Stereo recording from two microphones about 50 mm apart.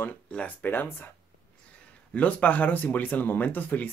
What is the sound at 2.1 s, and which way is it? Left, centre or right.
Speech, left.